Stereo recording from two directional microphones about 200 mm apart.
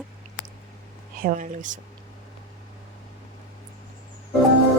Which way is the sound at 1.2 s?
40° right (ahead or behind).